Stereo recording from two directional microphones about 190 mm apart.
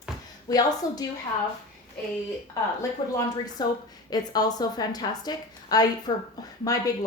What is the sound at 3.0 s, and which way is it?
Speech, 25° left (ahead or behind).